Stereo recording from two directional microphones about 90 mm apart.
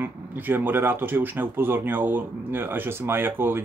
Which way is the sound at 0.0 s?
20° right (ahead or behind).